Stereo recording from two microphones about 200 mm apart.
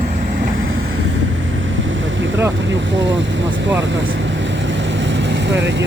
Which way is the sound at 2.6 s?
65° right (ahead or behind).